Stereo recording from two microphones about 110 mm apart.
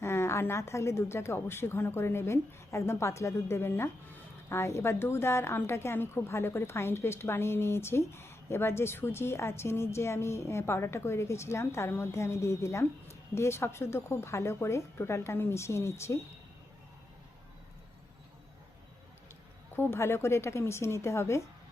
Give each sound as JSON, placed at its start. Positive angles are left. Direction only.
{"t": 0.0, "sound": "a woman's voice", "side_deg": 25}
{"t": 19.7, "sound": "a woman's voice", "side_deg": 20}